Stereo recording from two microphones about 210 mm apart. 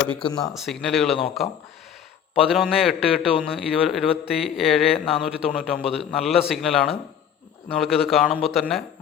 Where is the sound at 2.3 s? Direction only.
Centre (ahead or behind).